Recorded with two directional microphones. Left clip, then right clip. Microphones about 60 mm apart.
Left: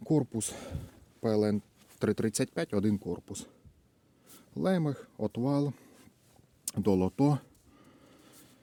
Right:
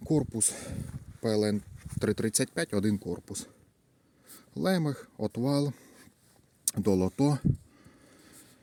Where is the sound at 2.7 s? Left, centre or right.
Right.